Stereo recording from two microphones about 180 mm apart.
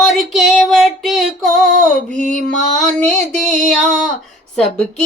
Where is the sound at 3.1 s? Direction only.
Centre (ahead or behind).